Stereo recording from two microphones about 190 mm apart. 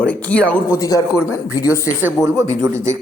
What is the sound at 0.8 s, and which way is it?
Speech, 20° left (ahead or behind).